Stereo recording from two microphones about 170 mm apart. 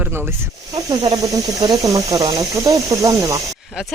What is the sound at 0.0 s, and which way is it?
Speech, 15° right (ahead or behind).